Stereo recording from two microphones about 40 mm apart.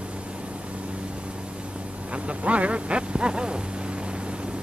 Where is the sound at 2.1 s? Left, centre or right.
Right.